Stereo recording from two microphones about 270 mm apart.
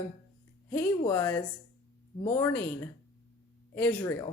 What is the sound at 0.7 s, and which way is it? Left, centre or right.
Speech, centre.